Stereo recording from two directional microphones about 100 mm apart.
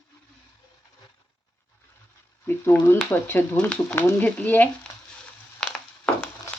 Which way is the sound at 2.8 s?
25° left (ahead or behind).